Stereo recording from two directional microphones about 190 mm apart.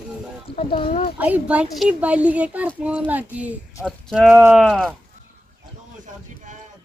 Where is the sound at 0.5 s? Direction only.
30° left (ahead or behind).